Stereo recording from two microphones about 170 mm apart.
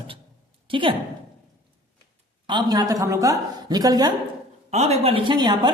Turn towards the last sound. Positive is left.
turn(degrees=-25)  # may be behind; listen again after turning